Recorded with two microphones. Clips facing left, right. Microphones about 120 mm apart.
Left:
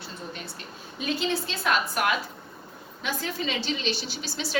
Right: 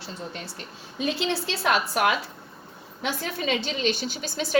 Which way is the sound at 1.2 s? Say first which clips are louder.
Right 1 dB; 80° right.